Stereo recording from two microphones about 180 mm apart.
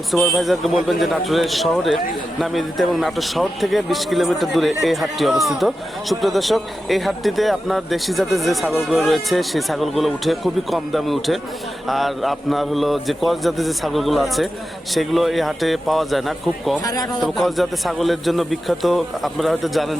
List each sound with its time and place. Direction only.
0.1 s speech: centre (ahead or behind)
16.8 s a man's voice: 20° left (ahead or behind)
17.2 s speech: centre (ahead or behind)